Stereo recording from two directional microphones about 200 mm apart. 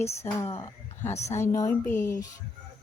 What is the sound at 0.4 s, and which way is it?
Speech, 30° left (ahead or behind).